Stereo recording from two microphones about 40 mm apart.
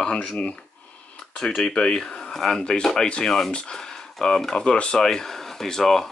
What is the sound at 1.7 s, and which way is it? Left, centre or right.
Speech, left.